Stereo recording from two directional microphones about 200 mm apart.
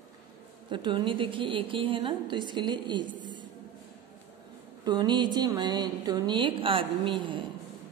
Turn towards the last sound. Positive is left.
turn(degrees=-25)  # may be behind; listen again after turning